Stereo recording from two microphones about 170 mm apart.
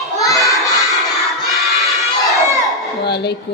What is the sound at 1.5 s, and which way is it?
Crowd, centre (ahead or behind).